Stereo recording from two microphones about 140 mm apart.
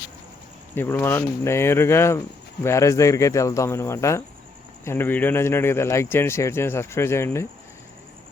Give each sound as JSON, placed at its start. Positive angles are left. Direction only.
{"t": 0.7, "sound": "speech", "side_deg": 15}